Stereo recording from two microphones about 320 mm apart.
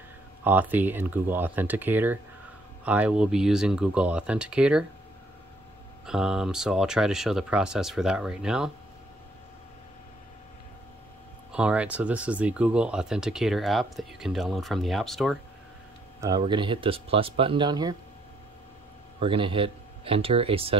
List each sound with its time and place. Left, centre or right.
0.4 s speech: centre
6.0 s speech: centre
11.5 s speech: centre
16.2 s speech: centre
19.1 s speech: centre